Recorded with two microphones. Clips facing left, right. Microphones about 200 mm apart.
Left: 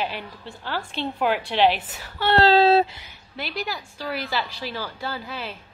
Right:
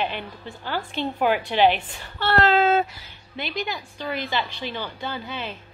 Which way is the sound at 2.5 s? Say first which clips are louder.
Left 5 dB; 35° left (ahead or behind).